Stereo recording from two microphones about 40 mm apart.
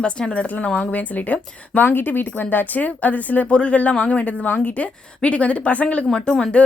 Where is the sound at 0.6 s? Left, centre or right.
Left.